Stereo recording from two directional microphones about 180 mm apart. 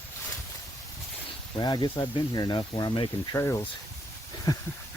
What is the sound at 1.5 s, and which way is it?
Speech, 25° left (ahead or behind).